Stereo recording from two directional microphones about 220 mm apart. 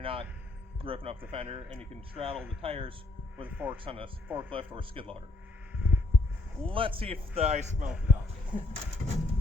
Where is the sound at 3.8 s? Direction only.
25° right (ahead or behind).